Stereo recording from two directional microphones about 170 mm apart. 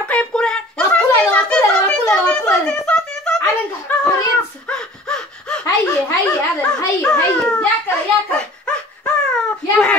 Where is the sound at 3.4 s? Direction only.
20° left (ahead or behind).